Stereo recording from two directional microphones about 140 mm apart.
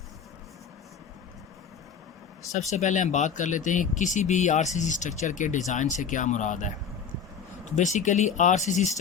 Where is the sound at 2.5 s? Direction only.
55° left (ahead or behind).